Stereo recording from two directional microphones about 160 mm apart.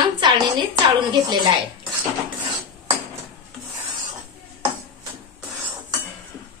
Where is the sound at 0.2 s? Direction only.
25° right (ahead or behind).